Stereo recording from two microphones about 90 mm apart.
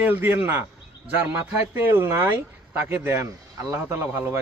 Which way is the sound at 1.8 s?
25° right (ahead or behind).